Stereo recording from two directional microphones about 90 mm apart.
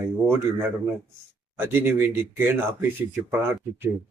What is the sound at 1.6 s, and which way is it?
Speech, 25° right (ahead or behind).